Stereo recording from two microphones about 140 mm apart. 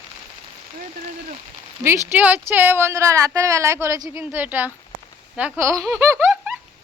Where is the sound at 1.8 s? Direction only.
20° right (ahead or behind).